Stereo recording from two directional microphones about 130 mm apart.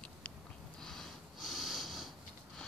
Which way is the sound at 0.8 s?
Centre (ahead or behind).